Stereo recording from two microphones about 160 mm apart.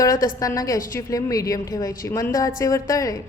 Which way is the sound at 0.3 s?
20° left (ahead or behind).